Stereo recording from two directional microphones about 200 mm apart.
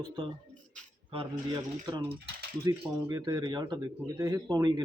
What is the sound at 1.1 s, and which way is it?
Speech, 25° right (ahead or behind).